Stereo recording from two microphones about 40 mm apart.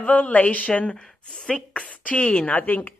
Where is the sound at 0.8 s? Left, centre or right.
Left.